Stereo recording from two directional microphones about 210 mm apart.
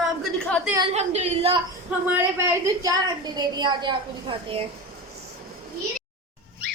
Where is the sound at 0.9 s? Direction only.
30° right (ahead or behind).